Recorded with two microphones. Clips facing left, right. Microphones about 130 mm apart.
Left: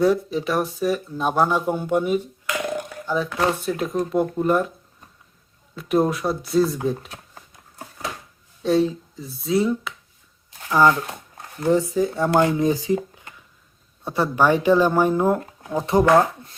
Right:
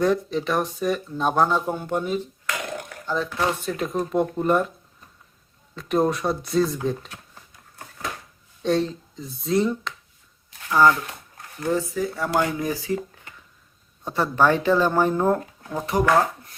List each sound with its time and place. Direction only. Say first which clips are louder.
0.0 s speech: left 2 dB; 5° left (ahead or behind)
5.7 s speech: left 1 dB; 5° left (ahead or behind)
8.6 s speech: left 3 dB; 5° left (ahead or behind)
10.7 s speech: left 1 dB; 20° left (ahead or behind)
14.0 s speech: left 1 dB; 15° left (ahead or behind)
15.9 s speech: left 4 dB; 25° left (ahead or behind)